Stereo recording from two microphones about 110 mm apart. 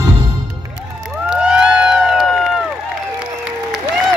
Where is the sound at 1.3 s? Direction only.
5° right (ahead or behind).